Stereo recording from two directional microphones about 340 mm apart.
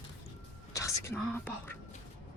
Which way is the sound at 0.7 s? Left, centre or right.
Centre.